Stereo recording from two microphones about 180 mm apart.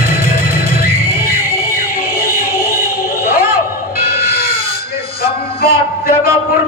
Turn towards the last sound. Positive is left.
turn(degrees=55)  # may be behind; listen again after turning